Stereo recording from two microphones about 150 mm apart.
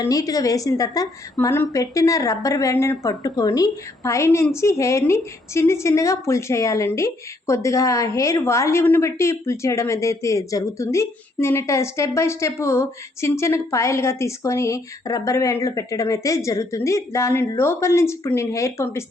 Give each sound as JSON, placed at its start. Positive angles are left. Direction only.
{"t": 0.0, "sound": "a woman's voice", "side_deg": 25}